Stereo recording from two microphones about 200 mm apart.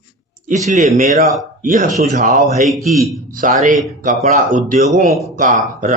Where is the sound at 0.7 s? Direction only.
35° right (ahead or behind).